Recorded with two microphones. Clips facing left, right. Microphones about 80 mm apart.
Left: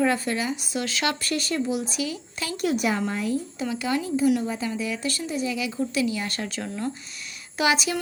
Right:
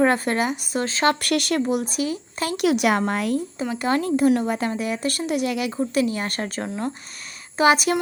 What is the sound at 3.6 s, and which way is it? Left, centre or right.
Speech, right.